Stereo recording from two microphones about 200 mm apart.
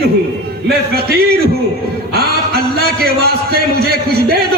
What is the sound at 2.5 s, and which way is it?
A man's voice, 50° right (ahead or behind).